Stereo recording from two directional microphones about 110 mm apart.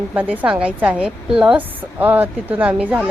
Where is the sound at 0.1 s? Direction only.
15° right (ahead or behind).